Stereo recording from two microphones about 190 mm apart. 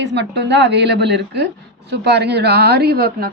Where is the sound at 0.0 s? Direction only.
65° right (ahead or behind).